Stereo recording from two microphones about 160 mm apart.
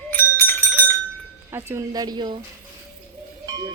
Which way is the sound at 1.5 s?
15° right (ahead or behind).